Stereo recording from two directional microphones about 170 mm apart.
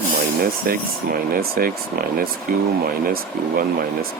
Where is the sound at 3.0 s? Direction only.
60° right (ahead or behind).